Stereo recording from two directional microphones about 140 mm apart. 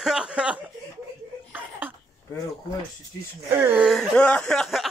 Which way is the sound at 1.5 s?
15° right (ahead or behind).